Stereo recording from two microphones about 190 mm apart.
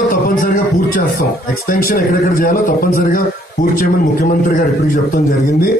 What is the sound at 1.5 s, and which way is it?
A man's voice, 50° left (ahead or behind).